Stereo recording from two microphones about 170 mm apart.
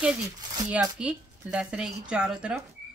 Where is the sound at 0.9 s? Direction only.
5° right (ahead or behind).